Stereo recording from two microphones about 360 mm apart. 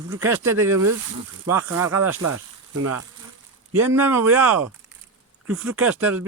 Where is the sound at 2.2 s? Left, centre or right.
Right.